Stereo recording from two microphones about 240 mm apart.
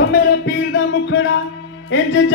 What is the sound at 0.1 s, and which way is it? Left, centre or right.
Music, left.